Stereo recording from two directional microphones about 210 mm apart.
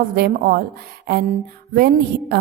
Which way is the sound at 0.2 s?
50° right (ahead or behind).